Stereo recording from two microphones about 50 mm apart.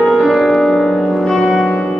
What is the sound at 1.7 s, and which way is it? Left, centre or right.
Music, left.